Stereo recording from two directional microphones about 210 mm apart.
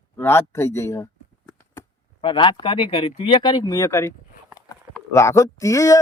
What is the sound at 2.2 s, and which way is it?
Speech, 20° left (ahead or behind).